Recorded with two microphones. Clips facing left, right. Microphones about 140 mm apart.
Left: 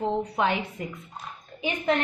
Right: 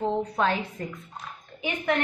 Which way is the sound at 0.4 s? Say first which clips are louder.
Even; 15° left (ahead or behind).